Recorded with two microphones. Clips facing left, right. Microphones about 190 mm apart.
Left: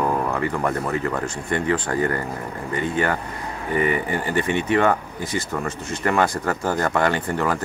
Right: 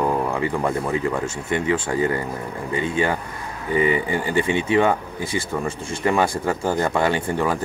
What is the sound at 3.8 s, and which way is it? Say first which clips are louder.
Speech: right 2 dB; 15° right (ahead or behind).